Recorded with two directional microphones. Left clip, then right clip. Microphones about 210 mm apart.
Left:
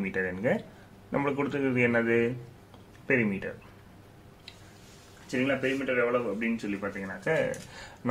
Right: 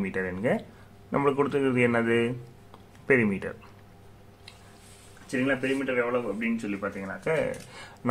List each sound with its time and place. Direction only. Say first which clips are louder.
0.0 s speech: right 1 dB; 15° right (ahead or behind)
5.3 s speech: right 1 dB; 15° right (ahead or behind)